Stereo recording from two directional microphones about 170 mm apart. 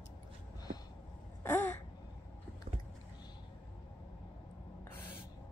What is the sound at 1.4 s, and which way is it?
Caw, 10° left (ahead or behind).